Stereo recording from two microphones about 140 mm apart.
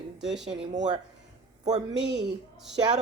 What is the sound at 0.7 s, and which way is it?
Speech, 60° right (ahead or behind).